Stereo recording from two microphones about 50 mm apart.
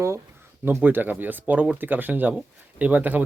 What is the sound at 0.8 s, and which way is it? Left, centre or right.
Speech, right.